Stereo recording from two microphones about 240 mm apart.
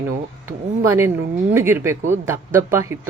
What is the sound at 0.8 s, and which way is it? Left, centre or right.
Speech, centre.